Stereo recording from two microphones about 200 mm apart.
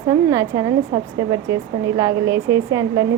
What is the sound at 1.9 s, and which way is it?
Speech, 15° right (ahead or behind).